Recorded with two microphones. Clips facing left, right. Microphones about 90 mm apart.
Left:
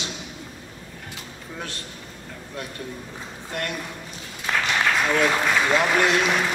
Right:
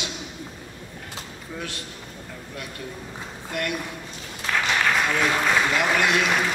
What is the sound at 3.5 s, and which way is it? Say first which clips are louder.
Speech: right 1 dB; 35° left (ahead or behind).